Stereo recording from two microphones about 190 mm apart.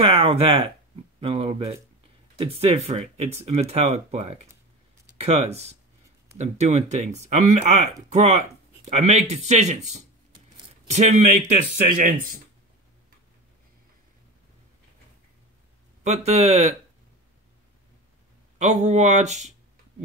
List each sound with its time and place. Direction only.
0.0 s speech: 30° right (ahead or behind)
10.9 s speech: 40° right (ahead or behind)
16.0 s speech: 35° right (ahead or behind)
18.6 s speech: 35° right (ahead or behind)